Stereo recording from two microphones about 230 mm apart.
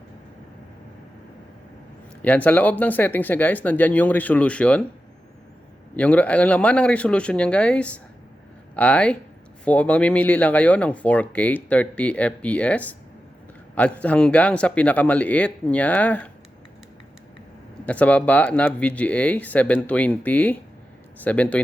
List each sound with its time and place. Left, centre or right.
2.2 s speech: centre
6.0 s speech: centre
17.8 s speech: centre